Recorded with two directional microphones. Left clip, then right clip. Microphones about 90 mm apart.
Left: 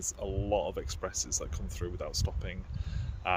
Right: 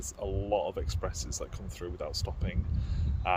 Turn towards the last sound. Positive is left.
turn(degrees=25)  # may be behind; listen again after turning